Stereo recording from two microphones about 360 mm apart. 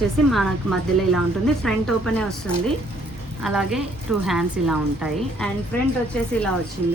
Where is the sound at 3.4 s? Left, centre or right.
Centre.